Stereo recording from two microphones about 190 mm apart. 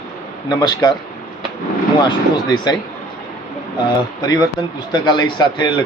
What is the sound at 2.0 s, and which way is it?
Speech, 25° left (ahead or behind).